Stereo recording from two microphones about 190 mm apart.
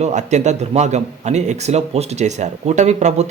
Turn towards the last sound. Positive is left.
turn(degrees=-35)  # may be behind; listen again after turning